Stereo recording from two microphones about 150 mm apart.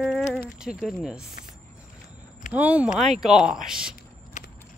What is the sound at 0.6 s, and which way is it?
Speech, 5° right (ahead or behind).